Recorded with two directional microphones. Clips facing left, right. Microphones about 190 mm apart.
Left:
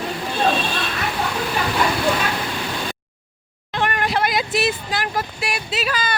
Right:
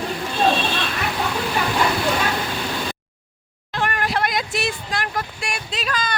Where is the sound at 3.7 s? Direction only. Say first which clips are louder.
Left 2 dB; centre (ahead or behind).